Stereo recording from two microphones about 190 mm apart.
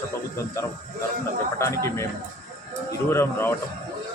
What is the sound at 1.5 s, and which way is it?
Speech, 15° left (ahead or behind).